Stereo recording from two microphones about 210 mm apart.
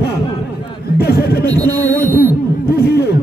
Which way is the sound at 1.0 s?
50° left (ahead or behind).